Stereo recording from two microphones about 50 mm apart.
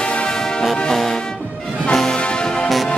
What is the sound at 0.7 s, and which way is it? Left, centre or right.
Music, centre.